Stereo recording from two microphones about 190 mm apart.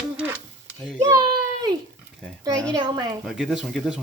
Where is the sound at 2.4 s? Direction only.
20° right (ahead or behind).